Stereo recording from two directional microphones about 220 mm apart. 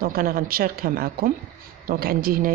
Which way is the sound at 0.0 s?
40° right (ahead or behind).